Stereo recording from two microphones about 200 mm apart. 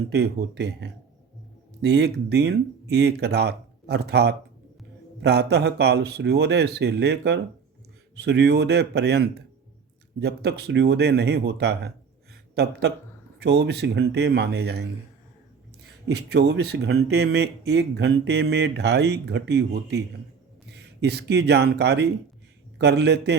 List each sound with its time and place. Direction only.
0.1 s speech: 55° right (ahead or behind)
12.3 s a sound: 55° right (ahead or behind)
13.4 s speech: 55° right (ahead or behind)
16.0 s speech: 55° right (ahead or behind)